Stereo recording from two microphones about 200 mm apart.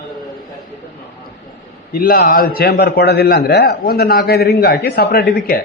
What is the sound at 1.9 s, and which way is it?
A man's voice, 45° left (ahead or behind).